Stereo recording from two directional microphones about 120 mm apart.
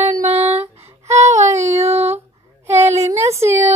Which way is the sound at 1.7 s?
60° right (ahead or behind).